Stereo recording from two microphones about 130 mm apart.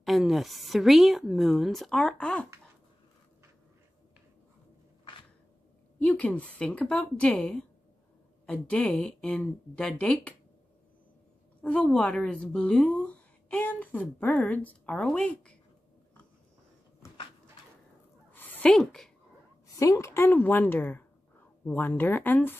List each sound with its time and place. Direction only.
0.0 s a woman's voice: centre (ahead or behind)
5.9 s a woman's voice: 10° left (ahead or behind)
11.6 s a woman's voice: 10° left (ahead or behind)
18.3 s a sound: 15° left (ahead or behind)
19.7 s a woman's voice: 25° left (ahead or behind)